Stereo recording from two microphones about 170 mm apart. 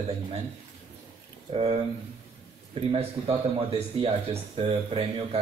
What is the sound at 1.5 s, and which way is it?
Speech, 35° right (ahead or behind).